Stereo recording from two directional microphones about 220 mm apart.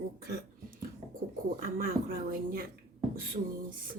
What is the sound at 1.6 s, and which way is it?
Speech, 40° right (ahead or behind).